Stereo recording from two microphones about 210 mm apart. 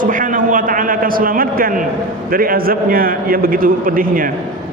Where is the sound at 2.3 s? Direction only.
45° right (ahead or behind).